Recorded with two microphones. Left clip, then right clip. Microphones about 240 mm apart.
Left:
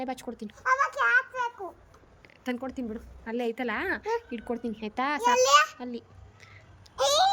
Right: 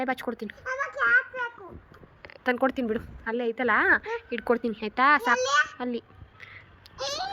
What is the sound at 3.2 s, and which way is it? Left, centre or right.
A woman's voice, centre.